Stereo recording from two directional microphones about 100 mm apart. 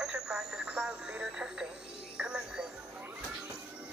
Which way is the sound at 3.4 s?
10° right (ahead or behind).